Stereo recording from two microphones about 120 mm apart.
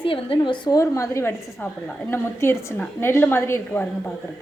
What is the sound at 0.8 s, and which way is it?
A woman's voice, 25° left (ahead or behind).